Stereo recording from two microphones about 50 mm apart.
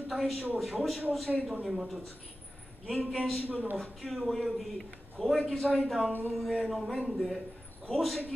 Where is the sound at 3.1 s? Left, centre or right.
Centre.